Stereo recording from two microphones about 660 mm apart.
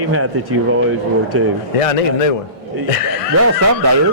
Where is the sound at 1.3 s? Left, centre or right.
Centre.